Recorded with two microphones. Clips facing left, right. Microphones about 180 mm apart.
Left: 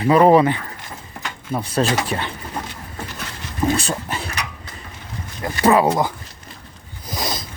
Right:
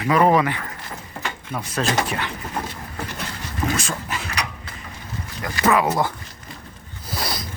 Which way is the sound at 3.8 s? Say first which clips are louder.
Left 3 dB; 35° left (ahead or behind).